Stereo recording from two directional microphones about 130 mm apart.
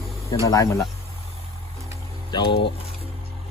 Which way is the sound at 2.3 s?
35° left (ahead or behind).